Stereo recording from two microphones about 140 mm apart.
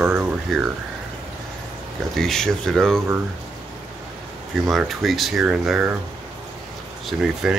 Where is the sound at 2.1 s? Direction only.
5° left (ahead or behind).